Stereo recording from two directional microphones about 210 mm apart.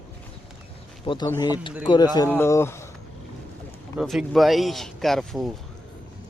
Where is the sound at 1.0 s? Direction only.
25° left (ahead or behind).